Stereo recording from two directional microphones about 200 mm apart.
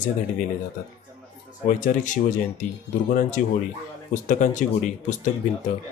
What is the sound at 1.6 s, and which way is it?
A man's voice, 40° left (ahead or behind).